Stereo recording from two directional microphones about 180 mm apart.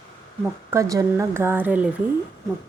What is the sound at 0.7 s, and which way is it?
Speech, 15° right (ahead or behind).